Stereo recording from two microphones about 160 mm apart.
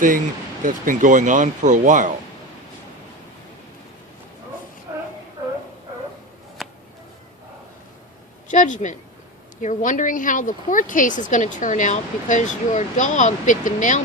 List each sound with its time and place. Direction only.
0.6 s speech: 55° right (ahead or behind)
6.6 s a sound: centre (ahead or behind)
8.4 s speech: 50° left (ahead or behind)